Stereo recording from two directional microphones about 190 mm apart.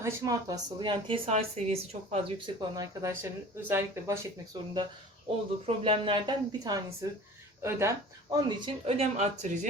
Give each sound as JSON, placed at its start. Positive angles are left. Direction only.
{"t": 0.0, "sound": "speech", "side_deg": -15}
{"t": 4.5, "sound": "speech", "side_deg": -25}
{"t": 9.1, "sound": "speech", "side_deg": -35}